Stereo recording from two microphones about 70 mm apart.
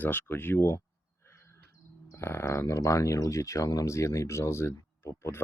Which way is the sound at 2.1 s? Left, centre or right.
Left.